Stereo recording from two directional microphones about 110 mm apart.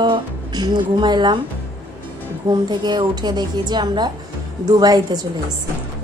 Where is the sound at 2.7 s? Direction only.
40° right (ahead or behind).